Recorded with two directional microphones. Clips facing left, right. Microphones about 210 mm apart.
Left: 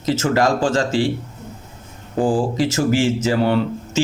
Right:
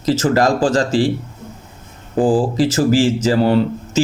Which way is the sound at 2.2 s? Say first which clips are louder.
Right 3 dB; 35° right (ahead or behind).